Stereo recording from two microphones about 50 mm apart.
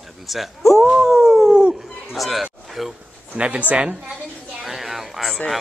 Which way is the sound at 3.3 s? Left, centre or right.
Right.